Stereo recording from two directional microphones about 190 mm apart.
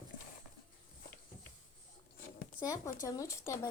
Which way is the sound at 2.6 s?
20° left (ahead or behind).